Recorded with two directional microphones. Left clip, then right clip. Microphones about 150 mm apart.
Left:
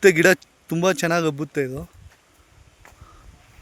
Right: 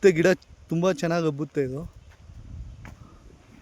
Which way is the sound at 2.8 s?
20° left (ahead or behind).